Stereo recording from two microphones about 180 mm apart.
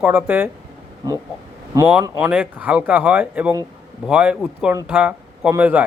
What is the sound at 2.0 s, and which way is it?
A man's voice, 10° right (ahead or behind).